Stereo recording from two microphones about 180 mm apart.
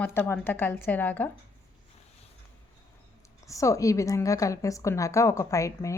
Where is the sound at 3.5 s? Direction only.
15° left (ahead or behind).